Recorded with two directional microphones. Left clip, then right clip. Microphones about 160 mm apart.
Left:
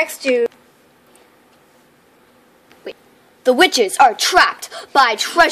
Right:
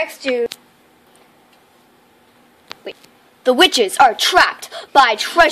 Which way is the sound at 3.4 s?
Centre (ahead or behind).